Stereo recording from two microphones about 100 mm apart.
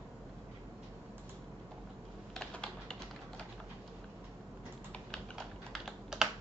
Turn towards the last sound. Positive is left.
turn(degrees=0)  # may be behind; listen again after turning